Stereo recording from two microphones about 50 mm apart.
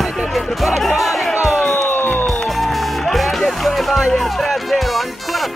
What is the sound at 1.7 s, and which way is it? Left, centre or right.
Music, left.